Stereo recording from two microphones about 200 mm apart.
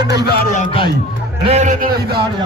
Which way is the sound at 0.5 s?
40° left (ahead or behind).